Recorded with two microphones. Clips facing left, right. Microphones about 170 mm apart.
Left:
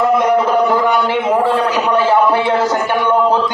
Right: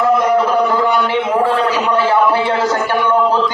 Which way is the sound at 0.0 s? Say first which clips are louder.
Even; 15° left (ahead or behind).